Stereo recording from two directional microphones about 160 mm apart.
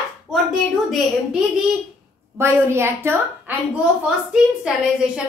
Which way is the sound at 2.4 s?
15° right (ahead or behind).